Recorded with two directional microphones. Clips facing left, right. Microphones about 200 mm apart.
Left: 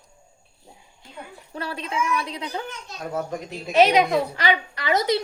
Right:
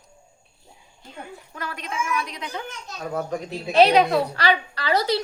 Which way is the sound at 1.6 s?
30° left (ahead or behind).